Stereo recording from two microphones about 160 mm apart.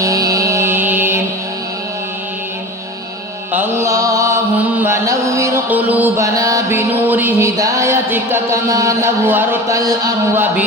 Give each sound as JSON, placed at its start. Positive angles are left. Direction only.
{"t": 0.0, "sound": "music", "side_deg": -20}
{"t": 3.5, "sound": "music", "side_deg": -15}
{"t": 4.5, "sound": "mantra", "side_deg": -15}
{"t": 10.3, "sound": "speech", "side_deg": -10}